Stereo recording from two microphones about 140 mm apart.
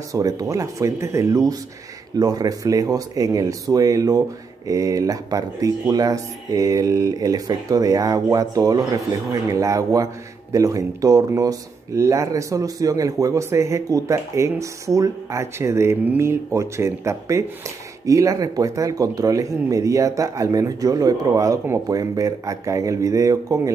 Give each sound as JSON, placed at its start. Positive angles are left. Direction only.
{"t": 0.1, "sound": "speech", "side_deg": -25}